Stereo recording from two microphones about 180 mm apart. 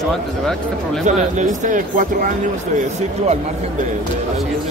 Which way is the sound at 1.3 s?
45° right (ahead or behind).